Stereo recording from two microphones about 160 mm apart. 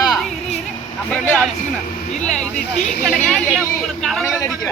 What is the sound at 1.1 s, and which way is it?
Speech, 5° left (ahead or behind).